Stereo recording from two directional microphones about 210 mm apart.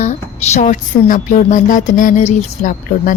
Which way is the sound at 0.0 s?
35° left (ahead or behind).